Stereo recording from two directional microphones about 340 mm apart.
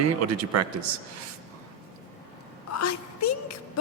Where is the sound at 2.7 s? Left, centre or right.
Left.